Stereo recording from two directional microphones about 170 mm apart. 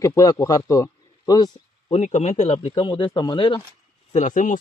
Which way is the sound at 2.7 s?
25° left (ahead or behind).